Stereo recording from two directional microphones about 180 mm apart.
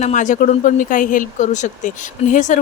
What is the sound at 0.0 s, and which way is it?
Speech, 45° left (ahead or behind).